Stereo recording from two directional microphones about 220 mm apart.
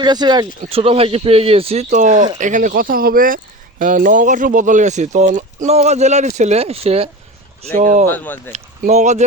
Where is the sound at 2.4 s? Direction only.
35° right (ahead or behind).